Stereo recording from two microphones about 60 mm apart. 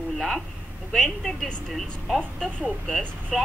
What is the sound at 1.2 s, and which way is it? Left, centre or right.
A woman's voice, centre.